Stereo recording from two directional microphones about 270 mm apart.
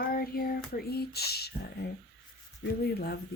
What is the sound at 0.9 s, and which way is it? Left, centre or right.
Speech, left.